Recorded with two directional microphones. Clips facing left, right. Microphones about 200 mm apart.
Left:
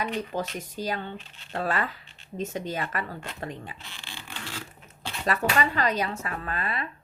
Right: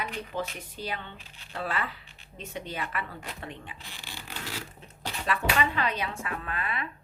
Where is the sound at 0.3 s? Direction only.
40° left (ahead or behind).